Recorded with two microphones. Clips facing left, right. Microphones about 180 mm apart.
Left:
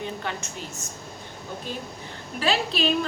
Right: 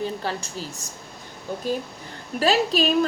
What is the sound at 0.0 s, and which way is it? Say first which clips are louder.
Speech: right 4 dB; 35° right (ahead or behind).